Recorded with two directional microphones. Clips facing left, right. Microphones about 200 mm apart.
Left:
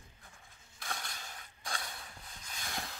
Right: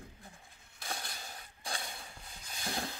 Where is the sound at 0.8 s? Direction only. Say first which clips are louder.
Right 1 dB; 30° right (ahead or behind).